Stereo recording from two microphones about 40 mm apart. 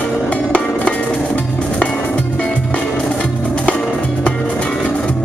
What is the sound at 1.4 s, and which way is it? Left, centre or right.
Music, left.